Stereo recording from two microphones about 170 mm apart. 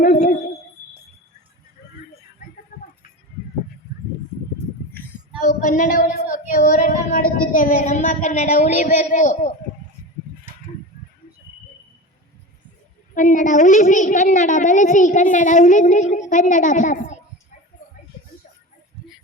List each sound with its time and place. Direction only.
0.0 s owl: 65° left (ahead or behind)
5.4 s speech: 55° left (ahead or behind)
13.1 s speech: 50° left (ahead or behind)